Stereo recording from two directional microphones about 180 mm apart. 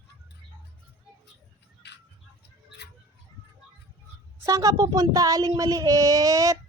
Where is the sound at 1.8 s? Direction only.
75° left (ahead or behind).